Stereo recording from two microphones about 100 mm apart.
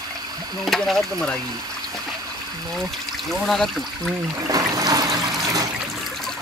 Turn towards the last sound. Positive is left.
turn(degrees=-40)  # may be behind; listen again after turning